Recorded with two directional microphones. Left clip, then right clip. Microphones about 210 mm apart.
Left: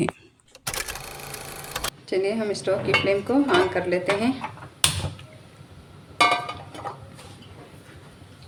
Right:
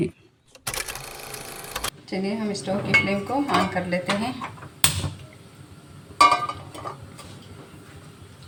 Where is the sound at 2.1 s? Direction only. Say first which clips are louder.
Left 6 dB; 45° left (ahead or behind).